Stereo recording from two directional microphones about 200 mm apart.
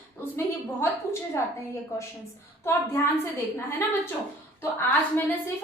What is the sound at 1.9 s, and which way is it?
A woman's voice, 15° left (ahead or behind).